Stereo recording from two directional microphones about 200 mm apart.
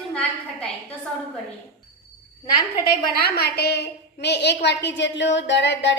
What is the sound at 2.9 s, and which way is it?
A woman's voice, 50° left (ahead or behind).